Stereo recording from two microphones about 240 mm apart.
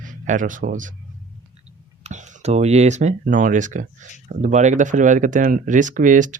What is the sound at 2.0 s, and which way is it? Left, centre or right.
Speech, right.